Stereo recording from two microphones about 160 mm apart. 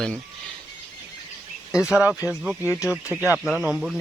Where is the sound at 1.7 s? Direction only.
5° right (ahead or behind).